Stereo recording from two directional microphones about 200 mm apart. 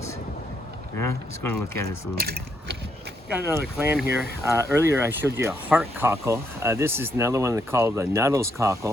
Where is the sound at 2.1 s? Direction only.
50° right (ahead or behind).